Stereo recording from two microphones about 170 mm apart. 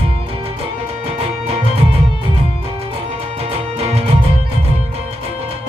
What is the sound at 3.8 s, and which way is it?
Music, 35° right (ahead or behind).